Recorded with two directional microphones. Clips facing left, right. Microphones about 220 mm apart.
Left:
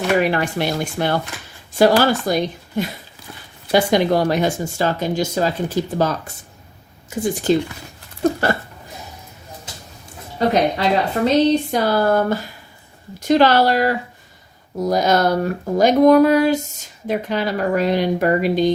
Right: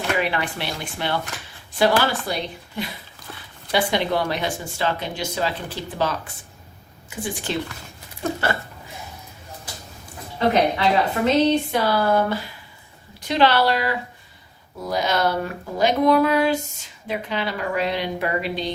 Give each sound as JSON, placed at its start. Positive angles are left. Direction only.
{"t": 0.2, "sound": "speech", "side_deg": 45}
{"t": 10.3, "sound": "speech", "side_deg": 40}